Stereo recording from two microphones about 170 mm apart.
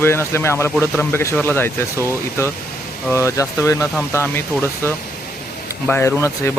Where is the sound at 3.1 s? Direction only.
15° left (ahead or behind).